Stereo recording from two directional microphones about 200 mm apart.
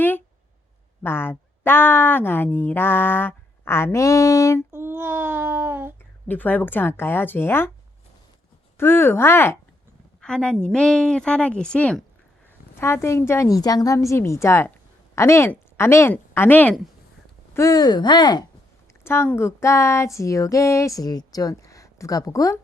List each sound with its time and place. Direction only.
1.0 s speech: 10° left (ahead or behind)
4.7 s a sound: 10° right (ahead or behind)
6.2 s speech: 10° left (ahead or behind)
8.8 s a woman's voice: 10° left (ahead or behind)
17.5 s speech: 15° left (ahead or behind)